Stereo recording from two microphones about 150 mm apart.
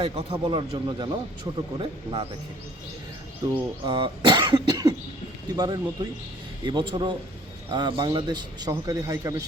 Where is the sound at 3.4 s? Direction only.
30° right (ahead or behind).